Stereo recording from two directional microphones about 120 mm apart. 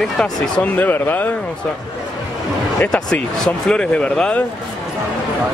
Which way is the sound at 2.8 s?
10° left (ahead or behind).